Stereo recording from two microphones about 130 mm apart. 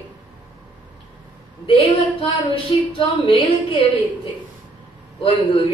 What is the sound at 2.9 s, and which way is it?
Speech, 40° left (ahead or behind).